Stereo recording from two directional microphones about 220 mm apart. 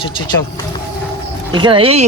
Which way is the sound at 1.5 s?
20° right (ahead or behind).